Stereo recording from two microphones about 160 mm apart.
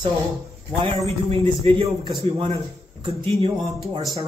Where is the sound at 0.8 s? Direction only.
35° right (ahead or behind).